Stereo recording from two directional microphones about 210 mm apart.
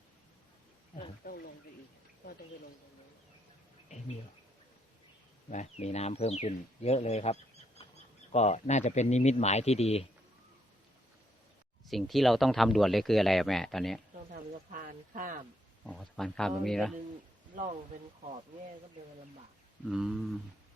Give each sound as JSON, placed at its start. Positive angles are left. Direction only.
{"t": 1.2, "sound": "speech", "side_deg": 50}
{"t": 5.5, "sound": "speech", "side_deg": 35}
{"t": 7.8, "sound": "insect", "side_deg": 25}
{"t": 8.3, "sound": "speech", "side_deg": 30}
{"t": 11.9, "sound": "speech", "side_deg": 0}
{"t": 14.3, "sound": "speech", "side_deg": -40}
{"t": 15.8, "sound": "speech", "side_deg": 0}
{"t": 17.5, "sound": "speech", "side_deg": -30}
{"t": 19.9, "sound": "speech", "side_deg": 0}